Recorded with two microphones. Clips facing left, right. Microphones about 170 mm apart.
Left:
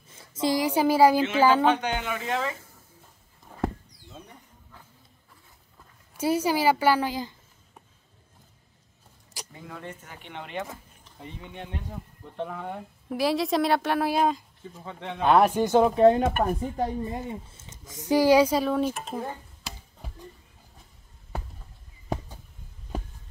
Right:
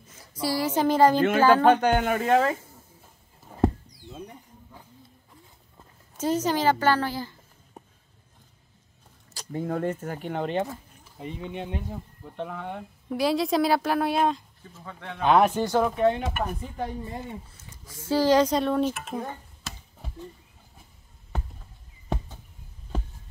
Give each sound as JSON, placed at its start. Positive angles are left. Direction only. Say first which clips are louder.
{"t": 0.2, "sound": "a woman's voice", "louder": "left 2 dB", "side_deg": 25}
{"t": 1.6, "sound": "speech", "louder": "right 5 dB", "side_deg": -50}
{"t": 6.1, "sound": "speech", "louder": "left 1 dB", "side_deg": 10}
{"t": 9.5, "sound": "speech", "louder": "right 13 dB", "side_deg": -45}
{"t": 11.1, "sound": "speech", "louder": "right 6 dB", "side_deg": -20}
{"t": 12.3, "sound": "speech", "louder": "even", "side_deg": 0}
{"t": 14.7, "sound": "speech", "louder": "left 3 dB", "side_deg": 20}
{"t": 15.2, "sound": "speech", "louder": "even", "side_deg": 5}
{"t": 15.6, "sound": "speech", "louder": "left 3 dB", "side_deg": 20}
{"t": 16.2, "sound": "speech", "louder": "left 6 dB", "side_deg": 45}
{"t": 17.0, "sound": "speech", "louder": "left 3 dB", "side_deg": 20}
{"t": 19.1, "sound": "a sound", "louder": "even", "side_deg": 5}